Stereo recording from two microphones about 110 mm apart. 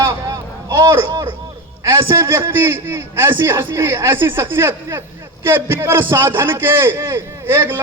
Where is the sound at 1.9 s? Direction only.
25° right (ahead or behind).